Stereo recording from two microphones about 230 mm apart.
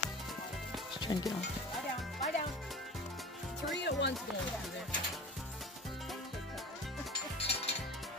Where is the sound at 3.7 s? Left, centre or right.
Left.